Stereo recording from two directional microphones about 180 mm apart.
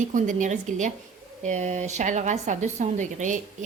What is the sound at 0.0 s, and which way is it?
Speech, 45° right (ahead or behind).